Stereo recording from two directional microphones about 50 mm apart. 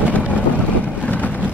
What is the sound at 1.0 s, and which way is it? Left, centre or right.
Vehicle, left.